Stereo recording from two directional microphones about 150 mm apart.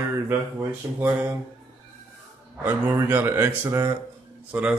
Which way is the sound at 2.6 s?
15° right (ahead or behind).